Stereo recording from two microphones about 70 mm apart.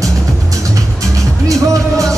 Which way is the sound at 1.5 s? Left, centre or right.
Right.